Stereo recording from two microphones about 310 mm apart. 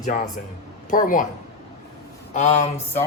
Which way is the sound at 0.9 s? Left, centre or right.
Left.